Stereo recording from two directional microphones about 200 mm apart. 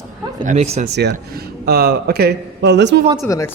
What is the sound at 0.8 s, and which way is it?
Speech, 55° right (ahead or behind).